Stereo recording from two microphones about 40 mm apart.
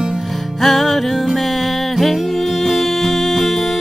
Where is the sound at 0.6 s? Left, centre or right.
Centre.